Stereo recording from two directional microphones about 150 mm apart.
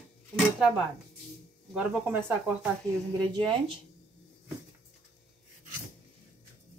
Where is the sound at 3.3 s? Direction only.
35° right (ahead or behind).